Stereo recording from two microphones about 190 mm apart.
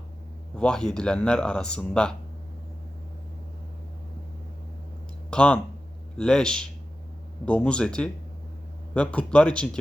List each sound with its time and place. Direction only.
0.5 s speech: 5° left (ahead or behind)
5.3 s speech: 5° left (ahead or behind)